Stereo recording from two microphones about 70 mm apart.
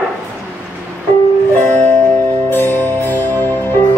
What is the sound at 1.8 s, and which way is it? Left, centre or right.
Music, left.